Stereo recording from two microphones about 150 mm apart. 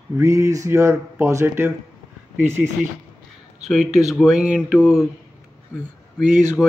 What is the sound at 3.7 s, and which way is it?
Speech, 5° right (ahead or behind).